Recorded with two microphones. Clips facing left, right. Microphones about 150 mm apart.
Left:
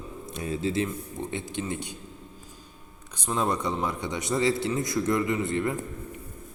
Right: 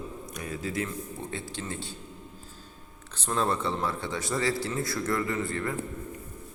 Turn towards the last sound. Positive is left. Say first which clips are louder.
# left 4 dB
turn(degrees=20)  # may be behind; listen again after turning